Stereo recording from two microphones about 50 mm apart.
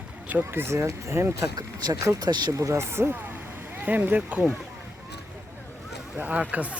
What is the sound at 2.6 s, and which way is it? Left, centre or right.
Speech, right.